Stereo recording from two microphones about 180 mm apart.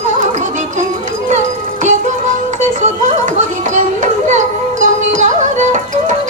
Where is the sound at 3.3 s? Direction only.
40° right (ahead or behind).